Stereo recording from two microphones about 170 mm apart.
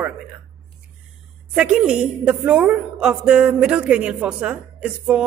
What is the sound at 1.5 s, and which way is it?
Speech, 5° right (ahead or behind).